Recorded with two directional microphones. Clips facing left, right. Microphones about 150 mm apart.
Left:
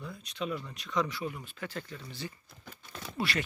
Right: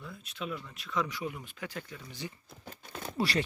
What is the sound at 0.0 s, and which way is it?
Speech, 5° right (ahead or behind).